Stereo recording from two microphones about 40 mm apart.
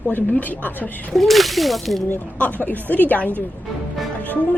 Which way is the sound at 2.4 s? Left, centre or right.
Left.